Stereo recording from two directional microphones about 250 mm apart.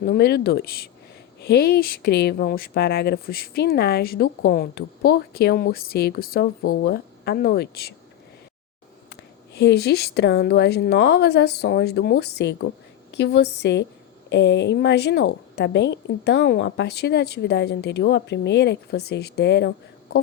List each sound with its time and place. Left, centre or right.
0.0 s speech: left
9.6 s a woman's voice: left